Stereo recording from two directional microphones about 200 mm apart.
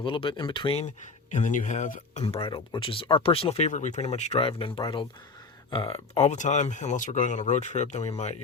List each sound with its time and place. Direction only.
0.0 s speech: 25° left (ahead or behind)